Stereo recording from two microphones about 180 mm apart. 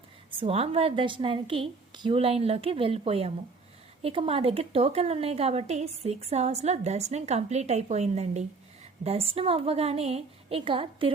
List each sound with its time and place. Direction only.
0.3 s a woman's voice: 30° right (ahead or behind)